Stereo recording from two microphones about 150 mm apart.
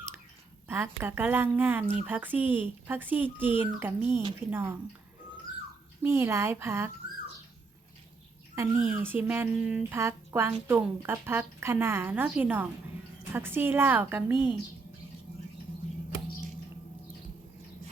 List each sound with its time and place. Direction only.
0.7 s speech: 15° right (ahead or behind)
6.0 s speech: 15° right (ahead or behind)
8.5 s speech: 15° right (ahead or behind)